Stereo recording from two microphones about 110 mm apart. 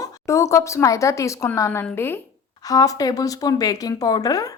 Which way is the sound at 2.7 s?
35° left (ahead or behind).